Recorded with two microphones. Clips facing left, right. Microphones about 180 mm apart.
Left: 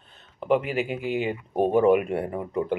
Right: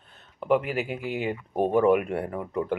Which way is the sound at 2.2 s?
15° left (ahead or behind).